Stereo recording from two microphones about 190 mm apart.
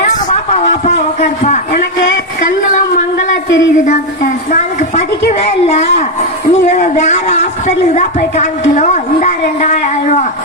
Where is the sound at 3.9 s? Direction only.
40° left (ahead or behind).